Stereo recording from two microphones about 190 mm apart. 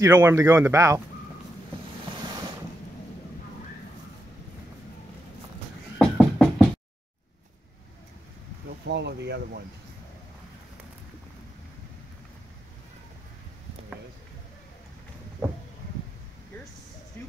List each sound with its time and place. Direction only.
0.0 s speech: 15° right (ahead or behind)
2.1 s boat: 25° right (ahead or behind)
5.9 s a sound: centre (ahead or behind)
8.8 s speech: 65° right (ahead or behind)